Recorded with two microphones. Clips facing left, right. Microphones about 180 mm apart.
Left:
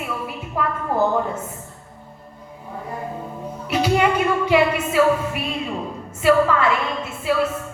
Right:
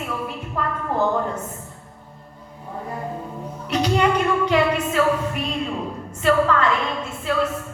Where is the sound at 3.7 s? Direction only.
10° left (ahead or behind).